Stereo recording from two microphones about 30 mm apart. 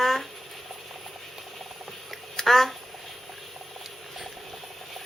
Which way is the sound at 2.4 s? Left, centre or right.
Centre.